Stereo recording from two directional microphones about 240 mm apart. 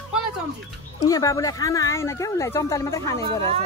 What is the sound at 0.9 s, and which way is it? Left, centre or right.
Speech, centre.